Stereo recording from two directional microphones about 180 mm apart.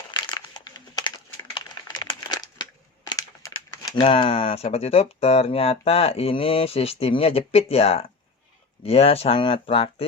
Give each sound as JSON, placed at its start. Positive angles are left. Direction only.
{"t": 0.1, "sound": "a sound", "side_deg": 25}
{"t": 3.1, "sound": "crumpling", "side_deg": 20}
{"t": 4.0, "sound": "speech", "side_deg": 30}